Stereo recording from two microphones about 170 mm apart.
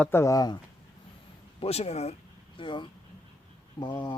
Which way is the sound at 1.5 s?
35° left (ahead or behind).